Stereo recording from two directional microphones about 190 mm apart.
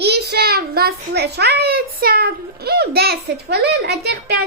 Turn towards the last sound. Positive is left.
turn(degrees=-60)  # may be behind; listen again after turning